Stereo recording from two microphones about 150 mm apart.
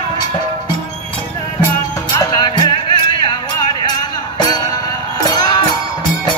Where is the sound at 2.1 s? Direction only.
25° left (ahead or behind).